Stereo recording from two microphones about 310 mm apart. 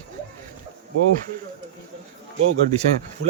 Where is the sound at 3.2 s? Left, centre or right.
Right.